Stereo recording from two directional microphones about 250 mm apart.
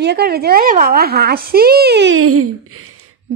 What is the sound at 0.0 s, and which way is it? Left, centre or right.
A woman's voice, right.